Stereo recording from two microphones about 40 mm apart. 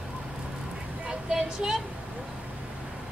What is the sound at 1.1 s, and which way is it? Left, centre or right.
Vehicle, centre.